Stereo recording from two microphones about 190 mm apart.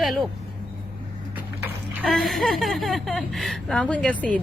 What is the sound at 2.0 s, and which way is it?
A woman's voice, centre (ahead or behind).